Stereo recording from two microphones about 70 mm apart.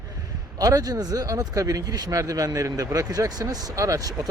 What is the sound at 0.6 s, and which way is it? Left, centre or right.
Speech, right.